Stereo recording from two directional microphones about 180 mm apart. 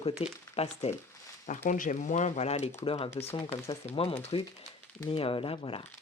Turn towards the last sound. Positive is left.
turn(degrees=30)  # may be behind; listen again after turning